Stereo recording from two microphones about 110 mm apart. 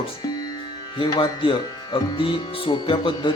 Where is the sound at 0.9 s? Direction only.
40° left (ahead or behind).